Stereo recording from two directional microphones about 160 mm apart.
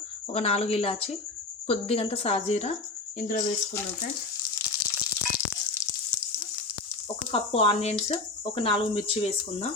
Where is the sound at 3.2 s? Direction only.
60° left (ahead or behind).